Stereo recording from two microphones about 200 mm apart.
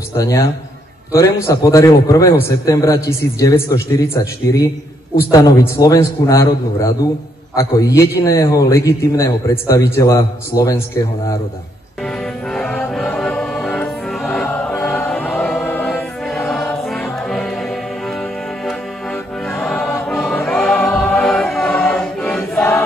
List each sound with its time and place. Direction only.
0.2 s a man's voice: 15° left (ahead or behind)
12.4 s music: 5° left (ahead or behind)
19.6 s music: 5° left (ahead or behind)